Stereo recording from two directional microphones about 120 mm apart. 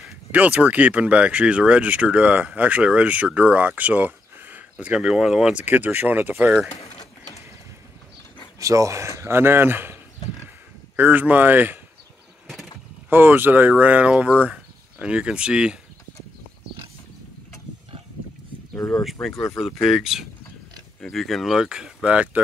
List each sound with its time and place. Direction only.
0.3 s speech: 10° right (ahead or behind)
8.5 s speech: 25° right (ahead or behind)
11.0 s speech: 15° right (ahead or behind)
13.1 s speech: 15° right (ahead or behind)
18.8 s speech: 30° left (ahead or behind)
19.5 s speech: centre (ahead or behind)